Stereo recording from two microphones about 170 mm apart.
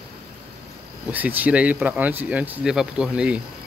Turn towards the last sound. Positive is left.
turn(degrees=-5)  # may be behind; listen again after turning